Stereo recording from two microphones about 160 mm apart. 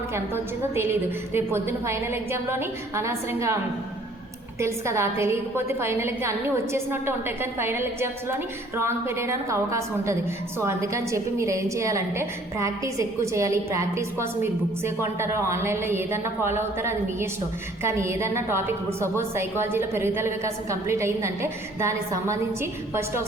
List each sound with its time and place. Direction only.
0.1 s a woman's voice: 15° right (ahead or behind)
4.6 s a woman's voice: 15° right (ahead or behind)